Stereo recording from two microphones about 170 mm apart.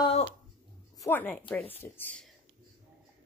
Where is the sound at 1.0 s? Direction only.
10° left (ahead or behind).